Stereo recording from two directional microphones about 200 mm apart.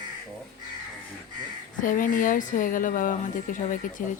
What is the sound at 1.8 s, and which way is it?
A woman's voice, 40° left (ahead or behind).